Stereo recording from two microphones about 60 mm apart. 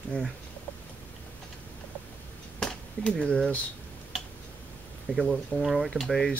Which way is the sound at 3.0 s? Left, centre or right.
Centre.